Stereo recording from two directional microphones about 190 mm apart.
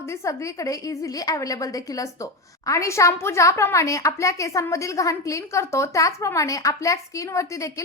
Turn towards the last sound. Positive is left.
turn(degrees=15)  # may be behind; listen again after turning